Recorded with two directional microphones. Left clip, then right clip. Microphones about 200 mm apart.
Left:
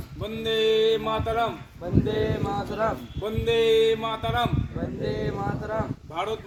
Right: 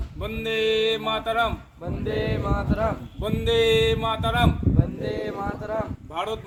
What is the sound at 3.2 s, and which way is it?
Speech, 5° left (ahead or behind).